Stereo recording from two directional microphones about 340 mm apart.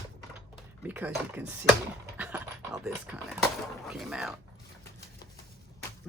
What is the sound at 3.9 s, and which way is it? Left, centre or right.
Speech, centre.